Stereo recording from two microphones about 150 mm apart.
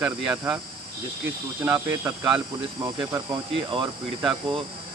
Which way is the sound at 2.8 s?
25° right (ahead or behind).